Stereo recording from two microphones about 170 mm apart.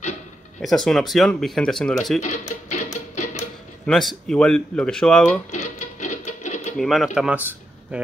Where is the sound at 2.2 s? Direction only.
45° left (ahead or behind).